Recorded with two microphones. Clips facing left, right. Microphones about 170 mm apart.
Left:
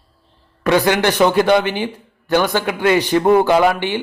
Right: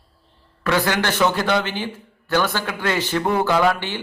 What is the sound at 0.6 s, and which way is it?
A man's voice, 20° left (ahead or behind).